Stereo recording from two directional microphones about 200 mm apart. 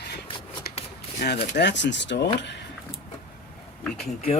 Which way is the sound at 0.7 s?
50° left (ahead or behind).